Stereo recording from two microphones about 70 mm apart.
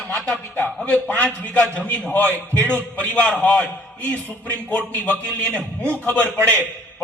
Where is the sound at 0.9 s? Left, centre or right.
Left.